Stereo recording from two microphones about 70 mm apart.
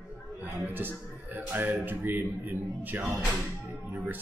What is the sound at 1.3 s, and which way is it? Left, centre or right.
Speech, right.